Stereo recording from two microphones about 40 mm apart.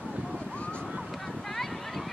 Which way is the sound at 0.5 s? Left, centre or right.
Left.